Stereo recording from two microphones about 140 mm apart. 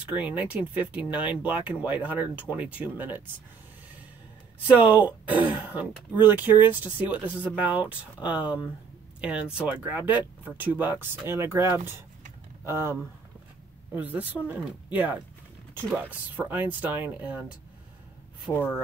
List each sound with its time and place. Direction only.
0.1 s speech: 10° right (ahead or behind)
5.0 s speech: 10° right (ahead or behind)
13.9 s speech: 10° right (ahead or behind)
18.5 s speech: 10° left (ahead or behind)